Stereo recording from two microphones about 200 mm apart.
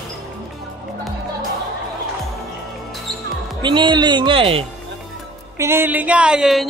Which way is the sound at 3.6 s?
20° right (ahead or behind).